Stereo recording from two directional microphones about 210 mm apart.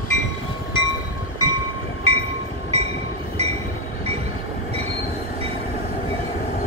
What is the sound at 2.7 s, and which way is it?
Train, 30° right (ahead or behind).